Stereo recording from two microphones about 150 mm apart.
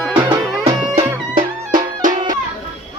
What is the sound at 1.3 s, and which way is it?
Music, 60° right (ahead or behind).